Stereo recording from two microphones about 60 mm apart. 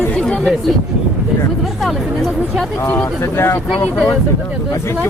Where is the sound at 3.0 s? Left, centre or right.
Left.